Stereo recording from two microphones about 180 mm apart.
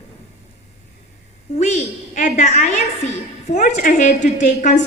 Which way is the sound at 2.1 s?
40° left (ahead or behind).